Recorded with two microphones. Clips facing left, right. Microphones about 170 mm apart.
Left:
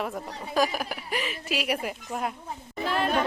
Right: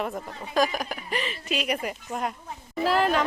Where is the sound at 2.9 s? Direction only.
90° right.